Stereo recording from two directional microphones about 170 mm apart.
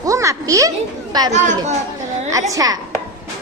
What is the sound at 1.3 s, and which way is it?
Speech, 45° right (ahead or behind).